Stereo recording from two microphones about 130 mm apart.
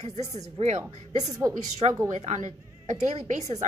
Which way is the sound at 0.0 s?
60° right (ahead or behind).